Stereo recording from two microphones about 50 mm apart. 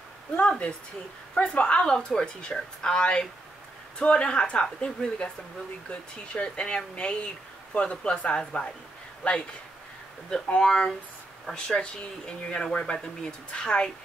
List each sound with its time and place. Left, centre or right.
0.4 s a woman's voice: left
10.6 s a woman's voice: centre